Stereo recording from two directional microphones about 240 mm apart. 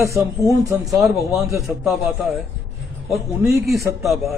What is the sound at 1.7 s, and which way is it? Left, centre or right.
Speech, centre.